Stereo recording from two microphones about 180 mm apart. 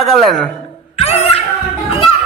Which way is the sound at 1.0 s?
35° left (ahead or behind).